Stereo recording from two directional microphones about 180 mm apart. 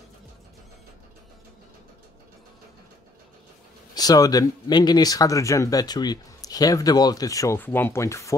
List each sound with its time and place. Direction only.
3.9 s speech: 20° left (ahead or behind)